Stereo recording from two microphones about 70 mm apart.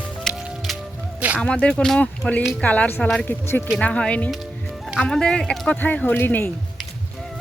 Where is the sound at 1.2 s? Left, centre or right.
Right.